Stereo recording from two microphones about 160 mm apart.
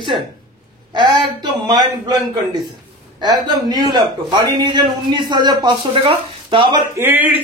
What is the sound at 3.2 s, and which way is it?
A man's voice, 25° right (ahead or behind).